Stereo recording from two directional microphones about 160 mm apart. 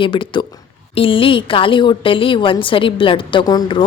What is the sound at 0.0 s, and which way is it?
A woman's voice, 30° left (ahead or behind).